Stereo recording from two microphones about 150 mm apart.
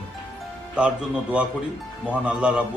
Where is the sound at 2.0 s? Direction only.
10° right (ahead or behind).